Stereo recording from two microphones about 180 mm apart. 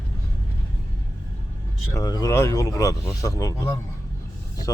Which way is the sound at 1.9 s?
20° left (ahead or behind).